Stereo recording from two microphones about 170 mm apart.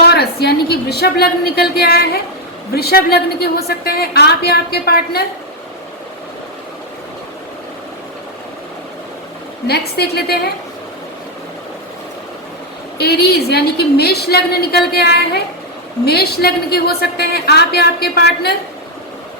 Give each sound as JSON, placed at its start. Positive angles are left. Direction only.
{"t": 0.0, "sound": "a woman's voice", "side_deg": 70}
{"t": 9.6, "sound": "a woman's voice", "side_deg": 70}
{"t": 13.0, "sound": "a woman's voice", "side_deg": 70}